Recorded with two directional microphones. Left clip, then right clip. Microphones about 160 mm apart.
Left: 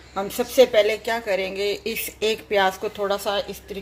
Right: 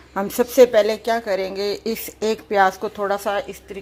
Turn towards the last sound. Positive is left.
turn(degrees=-35)  # may be behind; listen again after turning